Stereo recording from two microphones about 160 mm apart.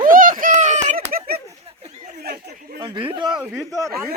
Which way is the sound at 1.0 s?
65° right (ahead or behind).